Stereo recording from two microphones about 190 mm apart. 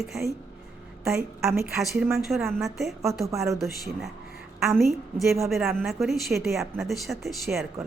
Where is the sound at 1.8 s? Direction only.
Centre (ahead or behind).